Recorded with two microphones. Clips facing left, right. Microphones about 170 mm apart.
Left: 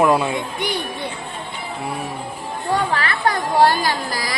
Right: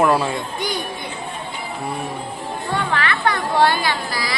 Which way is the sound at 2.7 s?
35° left (ahead or behind).